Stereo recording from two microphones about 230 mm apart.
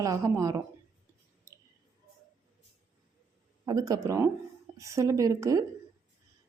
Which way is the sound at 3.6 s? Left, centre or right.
Centre.